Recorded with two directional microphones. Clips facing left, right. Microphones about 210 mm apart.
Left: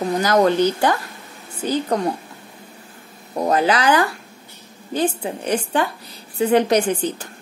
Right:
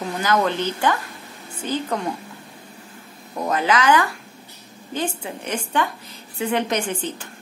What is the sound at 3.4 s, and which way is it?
A woman's voice, 35° left (ahead or behind).